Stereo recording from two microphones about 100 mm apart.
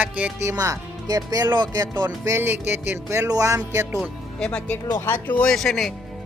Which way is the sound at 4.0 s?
10° left (ahead or behind).